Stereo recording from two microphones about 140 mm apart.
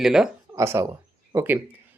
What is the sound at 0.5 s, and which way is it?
Speech, 20° right (ahead or behind).